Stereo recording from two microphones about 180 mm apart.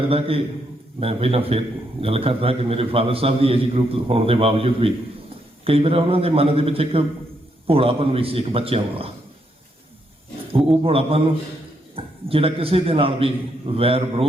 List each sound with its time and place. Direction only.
0.1 s a man's voice: 30° right (ahead or behind)
10.7 s a man's voice: 30° right (ahead or behind)